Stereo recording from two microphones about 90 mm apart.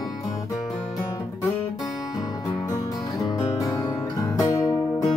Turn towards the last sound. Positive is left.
turn(degrees=40)  # may be behind; listen again after turning